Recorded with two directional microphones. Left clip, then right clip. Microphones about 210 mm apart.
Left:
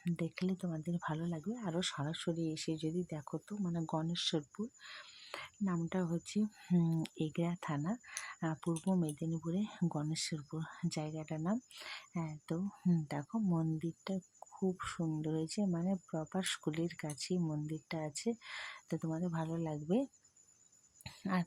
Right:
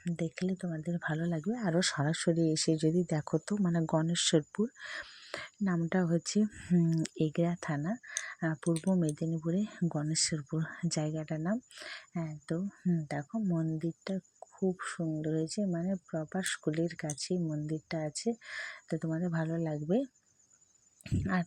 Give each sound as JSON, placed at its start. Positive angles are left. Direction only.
{"t": 0.0, "sound": "speech", "side_deg": -10}
{"t": 6.6, "sound": "speech", "side_deg": -10}